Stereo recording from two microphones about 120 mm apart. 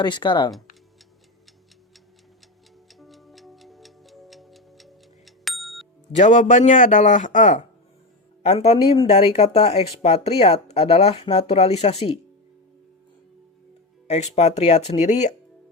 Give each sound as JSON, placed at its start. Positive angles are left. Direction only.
{"t": 0.0, "sound": "speech", "side_deg": 40}
{"t": 3.0, "sound": "tick-tock", "side_deg": 0}
{"t": 6.1, "sound": "speech", "side_deg": 85}
{"t": 8.4, "sound": "speech", "side_deg": 60}
{"t": 14.1, "sound": "speech", "side_deg": 70}